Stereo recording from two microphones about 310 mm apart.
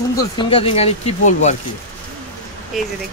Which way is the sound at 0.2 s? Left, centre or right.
Centre.